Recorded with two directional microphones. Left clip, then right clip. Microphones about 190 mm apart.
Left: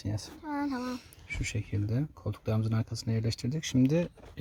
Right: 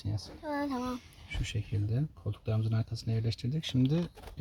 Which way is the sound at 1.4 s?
40° left (ahead or behind).